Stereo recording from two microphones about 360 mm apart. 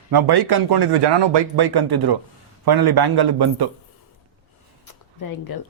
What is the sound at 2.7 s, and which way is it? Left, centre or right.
Speech, right.